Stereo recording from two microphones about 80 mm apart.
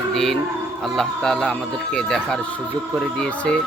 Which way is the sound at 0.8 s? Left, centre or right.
Centre.